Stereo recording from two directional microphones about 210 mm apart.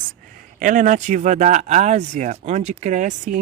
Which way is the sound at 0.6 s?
40° right (ahead or behind).